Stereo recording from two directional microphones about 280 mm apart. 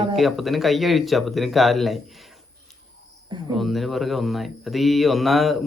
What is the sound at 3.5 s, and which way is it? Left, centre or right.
Speech, centre.